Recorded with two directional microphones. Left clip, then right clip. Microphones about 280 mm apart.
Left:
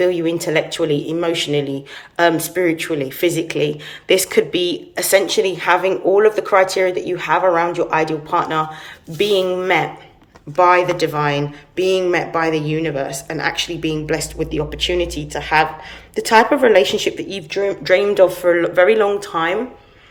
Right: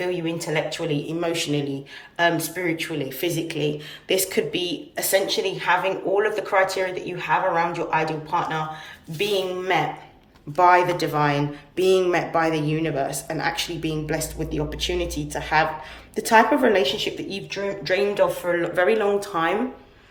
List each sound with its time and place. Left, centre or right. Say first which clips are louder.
0.0 s speech: left 9 dB; centre
17.5 s speech: left 9 dB; centre
18.6 s speech: left 6 dB; centre